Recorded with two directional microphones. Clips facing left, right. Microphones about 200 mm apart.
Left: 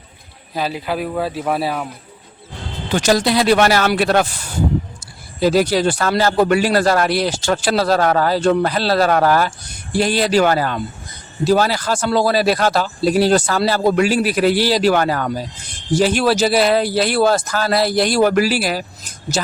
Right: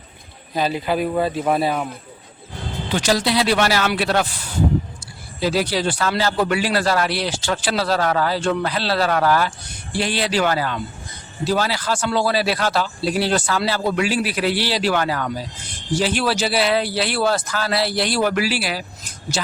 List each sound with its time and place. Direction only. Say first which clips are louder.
0.5 s speech: right 1 dB; 5° left (ahead or behind)
2.9 s a man's voice: left 4 dB; 45° left (ahead or behind)